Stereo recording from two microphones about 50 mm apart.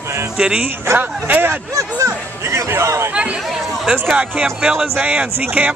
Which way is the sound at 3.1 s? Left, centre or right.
Right.